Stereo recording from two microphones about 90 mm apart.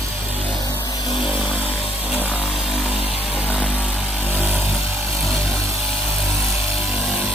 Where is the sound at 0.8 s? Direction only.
45° left (ahead or behind).